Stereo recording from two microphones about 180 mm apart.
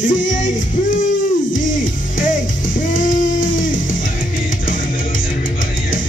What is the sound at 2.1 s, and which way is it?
Music, 45° left (ahead or behind).